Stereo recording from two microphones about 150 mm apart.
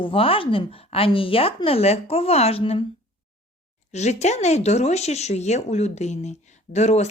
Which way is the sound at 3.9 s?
50° left (ahead or behind).